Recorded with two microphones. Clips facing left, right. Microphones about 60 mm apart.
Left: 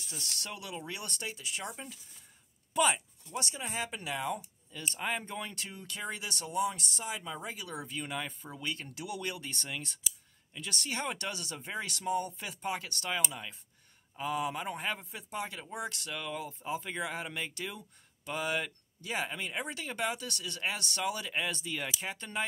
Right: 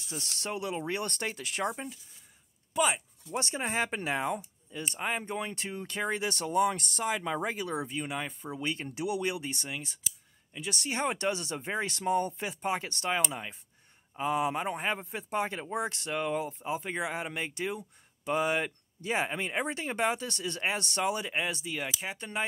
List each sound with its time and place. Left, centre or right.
0.1 s speech: right
2.7 s speech: centre
3.3 s speech: right
4.6 s speech: right